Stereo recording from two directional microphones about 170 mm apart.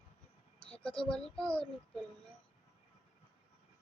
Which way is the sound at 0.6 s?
5° left (ahead or behind).